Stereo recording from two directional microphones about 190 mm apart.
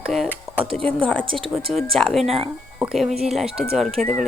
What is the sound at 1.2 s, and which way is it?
Speech, 25° right (ahead or behind).